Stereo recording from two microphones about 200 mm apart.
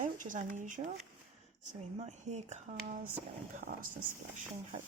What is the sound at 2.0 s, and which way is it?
Speech, 35° right (ahead or behind).